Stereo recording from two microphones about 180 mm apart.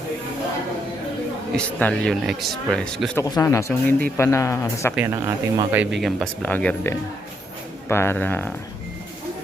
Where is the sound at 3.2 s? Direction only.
20° left (ahead or behind).